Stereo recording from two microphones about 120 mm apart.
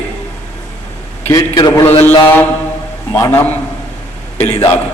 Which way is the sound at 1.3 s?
30° left (ahead or behind).